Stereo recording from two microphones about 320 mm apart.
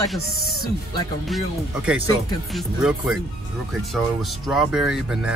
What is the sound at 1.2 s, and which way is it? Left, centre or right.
Speech, centre.